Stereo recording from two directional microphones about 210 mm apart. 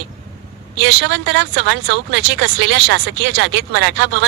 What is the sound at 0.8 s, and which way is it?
Speech, 60° right (ahead or behind).